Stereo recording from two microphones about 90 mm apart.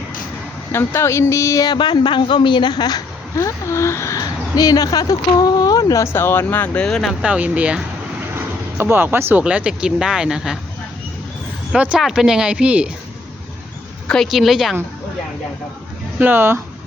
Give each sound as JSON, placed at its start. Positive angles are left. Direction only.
{"t": 0.7, "sound": "speech", "side_deg": 25}
{"t": 1.6, "sound": "a woman's voice", "side_deg": 55}
{"t": 3.3, "sound": "speech", "side_deg": 35}
{"t": 4.5, "sound": "speech", "side_deg": 45}
{"t": 6.7, "sound": "a woman's voice", "side_deg": 5}
{"t": 7.2, "sound": "speech", "side_deg": -15}
{"t": 8.4, "sound": "speech", "side_deg": -25}
{"t": 9.4, "sound": "speech", "side_deg": -15}
{"t": 11.7, "sound": "speech", "side_deg": -10}
{"t": 14.3, "sound": "a woman's voice", "side_deg": 0}
{"t": 16.1, "sound": "speech", "side_deg": -20}